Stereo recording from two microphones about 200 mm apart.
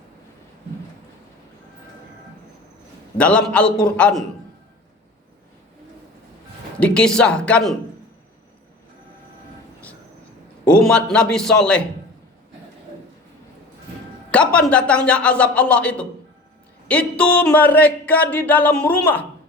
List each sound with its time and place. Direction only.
3.2 s speech: 5° left (ahead or behind)
6.7 s speech: 5° left (ahead or behind)
10.7 s speech: 5° left (ahead or behind)
14.3 s speech: 5° left (ahead or behind)